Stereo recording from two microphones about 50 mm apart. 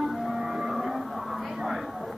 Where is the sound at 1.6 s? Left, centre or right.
Centre.